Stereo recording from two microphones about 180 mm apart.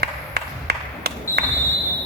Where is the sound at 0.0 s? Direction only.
65° right (ahead or behind).